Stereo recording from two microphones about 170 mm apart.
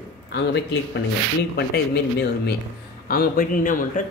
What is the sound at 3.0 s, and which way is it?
Speech, 60° left (ahead or behind).